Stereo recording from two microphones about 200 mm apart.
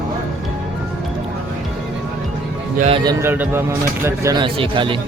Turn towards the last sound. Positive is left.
turn(degrees=-25)  # may be behind; listen again after turning